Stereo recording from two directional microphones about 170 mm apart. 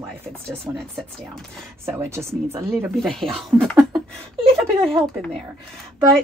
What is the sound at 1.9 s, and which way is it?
Speech, 15° right (ahead or behind).